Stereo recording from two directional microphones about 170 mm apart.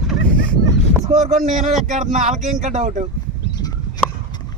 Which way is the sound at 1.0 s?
40° right (ahead or behind).